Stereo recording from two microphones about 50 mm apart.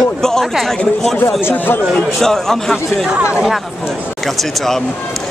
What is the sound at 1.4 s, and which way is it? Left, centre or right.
Speech, left.